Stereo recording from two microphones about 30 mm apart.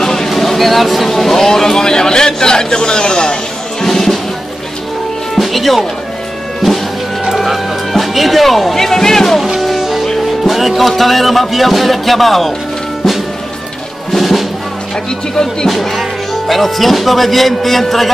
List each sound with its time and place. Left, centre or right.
0.0 s a sound: centre
0.3 s speech: centre; by 3.3 s left
3.8 s music: centre
5.4 s music: centre
7.4 s music: centre
9.6 s music: centre
10.2 s speech: centre
14.1 s music: centre
16.0 s speech: centre